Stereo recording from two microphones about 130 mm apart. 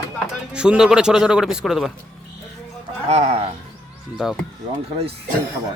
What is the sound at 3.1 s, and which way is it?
Speech, 55° right (ahead or behind).